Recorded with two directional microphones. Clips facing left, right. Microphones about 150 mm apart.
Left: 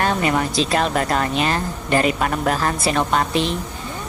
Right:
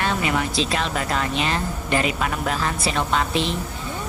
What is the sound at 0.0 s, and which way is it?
Speech, 45° left (ahead or behind).